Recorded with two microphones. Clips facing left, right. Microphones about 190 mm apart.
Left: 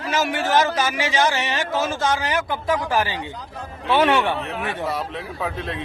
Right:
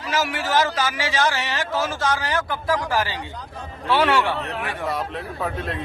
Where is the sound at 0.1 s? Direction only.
25° left (ahead or behind).